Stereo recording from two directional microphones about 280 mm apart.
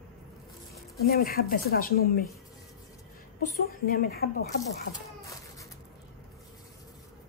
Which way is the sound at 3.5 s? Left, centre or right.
Left.